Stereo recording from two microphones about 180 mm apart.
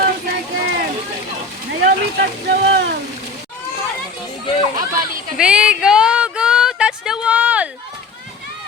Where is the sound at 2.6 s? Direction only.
70° right (ahead or behind).